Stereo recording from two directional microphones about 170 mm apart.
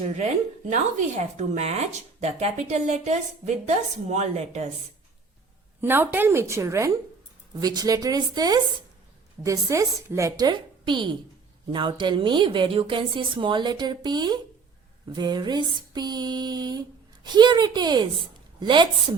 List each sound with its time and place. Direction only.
1.4 s speech: 40° right (ahead or behind)
5.8 s a woman's voice: 10° right (ahead or behind)